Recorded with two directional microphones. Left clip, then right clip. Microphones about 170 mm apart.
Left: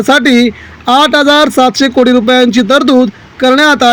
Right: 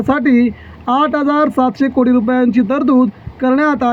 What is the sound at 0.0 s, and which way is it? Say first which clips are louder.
Speech: left 7 dB; 35° left (ahead or behind).